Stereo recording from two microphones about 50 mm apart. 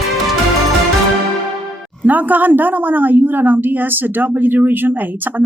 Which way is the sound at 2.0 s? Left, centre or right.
Right.